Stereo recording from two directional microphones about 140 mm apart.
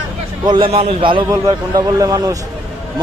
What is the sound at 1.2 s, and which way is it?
A man's voice, 25° right (ahead or behind).